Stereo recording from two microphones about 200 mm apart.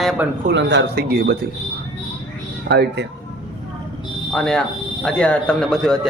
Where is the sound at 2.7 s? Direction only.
60° right (ahead or behind).